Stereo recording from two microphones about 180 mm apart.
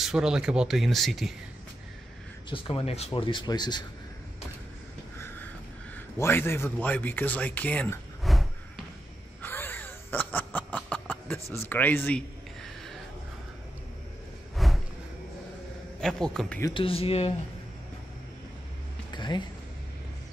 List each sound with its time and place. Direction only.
0.0 s speech: 5° right (ahead or behind)
2.5 s speech: 30° left (ahead or behind)
5.1 s a sound: 15° left (ahead or behind)
5.9 s a man's voice: 10° left (ahead or behind)
9.4 s wheeze: 10° left (ahead or behind)
11.7 s speech: 10° left (ahead or behind)
12.6 s a sound: centre (ahead or behind)
14.6 s a sound: centre (ahead or behind)
16.0 s speech: 5° left (ahead or behind)
16.6 s speech: 30° left (ahead or behind)
19.1 s music: 25° left (ahead or behind)